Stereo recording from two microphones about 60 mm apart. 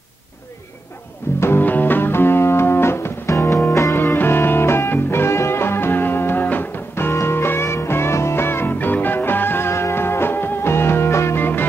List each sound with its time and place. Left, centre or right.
1.4 s music: left
3.9 s music: left